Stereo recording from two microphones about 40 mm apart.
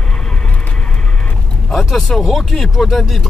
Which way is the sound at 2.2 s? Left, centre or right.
Centre.